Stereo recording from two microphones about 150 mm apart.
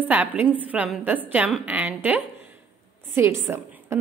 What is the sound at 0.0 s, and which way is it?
A woman's voice, 10° right (ahead or behind).